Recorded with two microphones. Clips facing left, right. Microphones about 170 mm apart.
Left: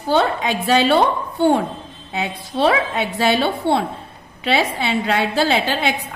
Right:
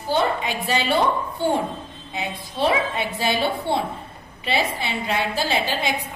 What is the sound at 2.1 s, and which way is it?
A woman's voice, 70° left (ahead or behind).